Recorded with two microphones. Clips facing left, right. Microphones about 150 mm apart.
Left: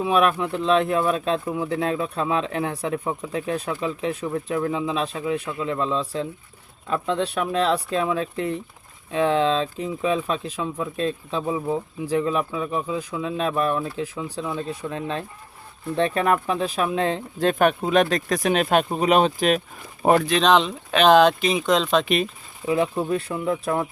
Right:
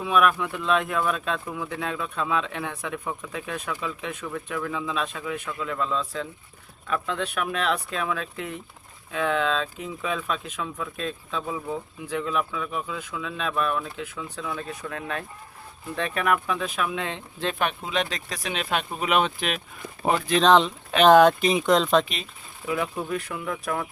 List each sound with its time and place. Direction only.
0.0 s speech: 35° left (ahead or behind)
20.1 s speech: 75° left (ahead or behind)
21.0 s speech: 5° right (ahead or behind)
22.0 s speech: 60° left (ahead or behind)
22.6 s speech: 30° left (ahead or behind)